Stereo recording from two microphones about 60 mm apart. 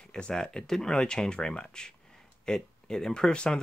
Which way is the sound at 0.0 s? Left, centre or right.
Centre.